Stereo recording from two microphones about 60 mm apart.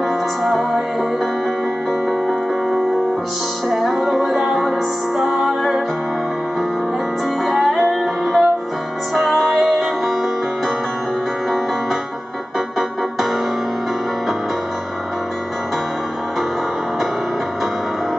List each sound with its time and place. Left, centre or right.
0.4 s music: centre
3.6 s music: centre
7.4 s music: centre
12.5 s keyboard: centre